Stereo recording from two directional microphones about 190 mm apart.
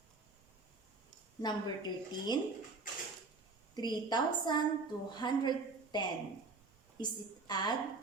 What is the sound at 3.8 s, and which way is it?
A woman's voice, 20° left (ahead or behind).